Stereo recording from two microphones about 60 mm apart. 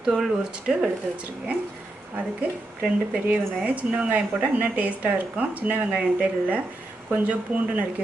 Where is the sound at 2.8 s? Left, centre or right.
Right.